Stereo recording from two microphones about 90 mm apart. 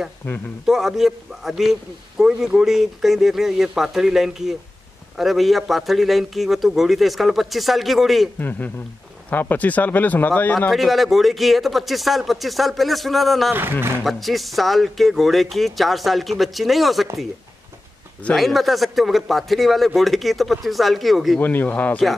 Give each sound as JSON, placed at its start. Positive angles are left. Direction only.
{"t": 0.2, "sound": "speech", "side_deg": 25}
{"t": 0.7, "sound": "a man's voice", "side_deg": -5}
{"t": 8.4, "sound": "speech", "side_deg": 20}
{"t": 10.7, "sound": "a man's voice", "side_deg": 0}
{"t": 13.5, "sound": "speech", "side_deg": -25}
{"t": 14.0, "sound": "a man's voice", "side_deg": 0}
{"t": 18.3, "sound": "a man's voice", "side_deg": 0}
{"t": 21.4, "sound": "speech", "side_deg": 20}